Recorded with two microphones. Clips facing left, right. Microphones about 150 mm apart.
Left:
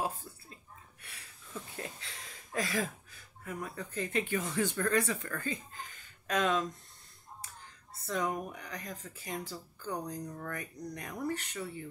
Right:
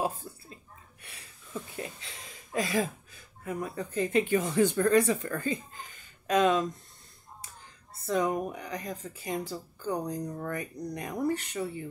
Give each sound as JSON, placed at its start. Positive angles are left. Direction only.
{"t": 0.3, "sound": "burping", "side_deg": -20}
{"t": 1.0, "sound": "a sound", "side_deg": -15}
{"t": 6.2, "sound": "speech", "side_deg": -15}
{"t": 8.1, "sound": "speech", "side_deg": -15}